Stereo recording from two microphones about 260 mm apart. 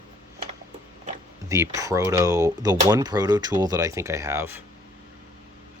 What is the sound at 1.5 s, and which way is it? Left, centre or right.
Speech, centre.